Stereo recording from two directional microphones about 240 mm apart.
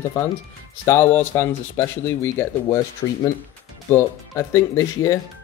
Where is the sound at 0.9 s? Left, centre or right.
Centre.